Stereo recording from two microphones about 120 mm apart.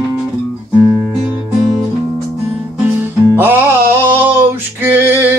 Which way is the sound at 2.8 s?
15° right (ahead or behind).